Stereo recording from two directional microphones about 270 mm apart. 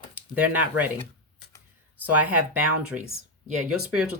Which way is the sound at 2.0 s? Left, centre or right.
Centre.